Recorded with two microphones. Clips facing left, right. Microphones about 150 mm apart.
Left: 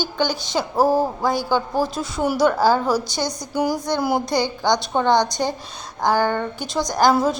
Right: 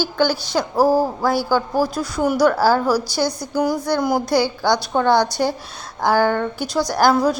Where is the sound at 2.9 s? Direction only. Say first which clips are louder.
Right 2 dB; 20° left (ahead or behind).